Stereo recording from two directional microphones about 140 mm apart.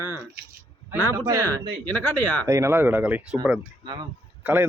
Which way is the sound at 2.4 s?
20° right (ahead or behind).